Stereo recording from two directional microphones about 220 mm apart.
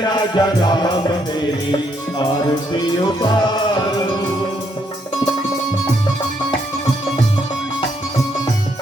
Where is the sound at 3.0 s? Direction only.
20° left (ahead or behind).